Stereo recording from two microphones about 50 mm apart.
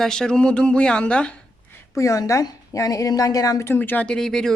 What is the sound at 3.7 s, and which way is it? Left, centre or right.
Speech, left.